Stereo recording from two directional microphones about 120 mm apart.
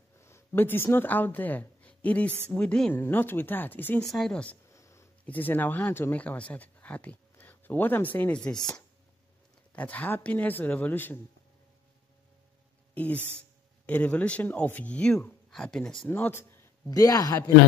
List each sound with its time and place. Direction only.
0.2 s speech: 20° left (ahead or behind)
4.0 s speech: centre (ahead or behind)
4.6 s a sound: 25° left (ahead or behind)
5.2 s speech: 15° left (ahead or behind)
12.9 s speech: 10° left (ahead or behind)
16.1 s a sound: 20° left (ahead or behind)
16.9 s speech: 30° left (ahead or behind)